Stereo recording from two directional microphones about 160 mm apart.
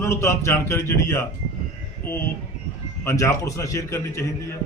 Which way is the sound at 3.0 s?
15° left (ahead or behind).